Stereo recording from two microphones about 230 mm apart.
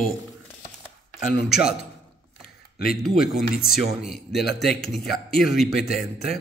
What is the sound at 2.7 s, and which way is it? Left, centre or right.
Speech, left.